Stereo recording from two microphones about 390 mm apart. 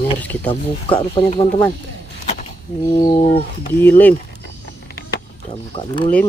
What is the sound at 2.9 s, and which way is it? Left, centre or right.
Speech, centre.